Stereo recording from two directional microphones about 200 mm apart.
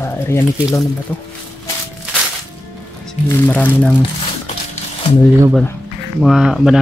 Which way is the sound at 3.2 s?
10° left (ahead or behind).